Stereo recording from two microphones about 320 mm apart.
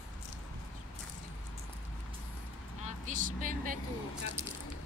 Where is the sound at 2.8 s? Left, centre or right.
Right.